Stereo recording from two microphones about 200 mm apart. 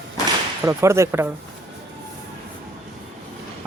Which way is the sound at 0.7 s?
15° right (ahead or behind).